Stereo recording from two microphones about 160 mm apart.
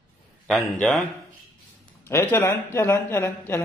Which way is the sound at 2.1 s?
15° left (ahead or behind).